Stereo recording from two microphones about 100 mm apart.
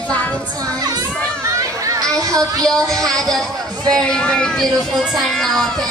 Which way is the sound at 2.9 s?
5° left (ahead or behind).